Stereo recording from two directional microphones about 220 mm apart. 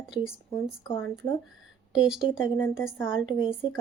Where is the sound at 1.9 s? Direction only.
5° right (ahead or behind).